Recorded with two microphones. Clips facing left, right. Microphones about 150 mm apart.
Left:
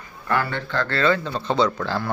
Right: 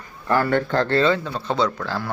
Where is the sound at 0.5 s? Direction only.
40° right (ahead or behind).